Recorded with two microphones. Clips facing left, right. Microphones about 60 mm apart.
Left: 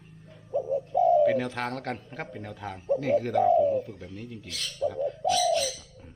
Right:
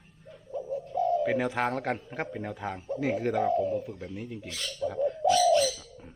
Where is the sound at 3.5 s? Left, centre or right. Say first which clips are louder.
Left 5 dB; centre.